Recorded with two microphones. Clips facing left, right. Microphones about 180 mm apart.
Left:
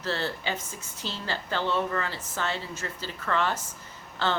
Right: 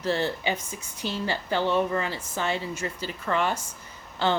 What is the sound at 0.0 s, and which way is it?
Speech, 15° right (ahead or behind).